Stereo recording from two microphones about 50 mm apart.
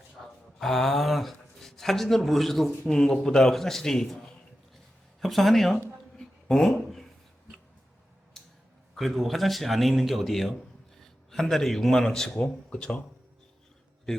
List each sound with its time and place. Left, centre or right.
0.2 s a man's voice: centre
5.2 s speech: centre
6.1 s a sound: centre
9.0 s a man's voice: centre
12.4 s speech: left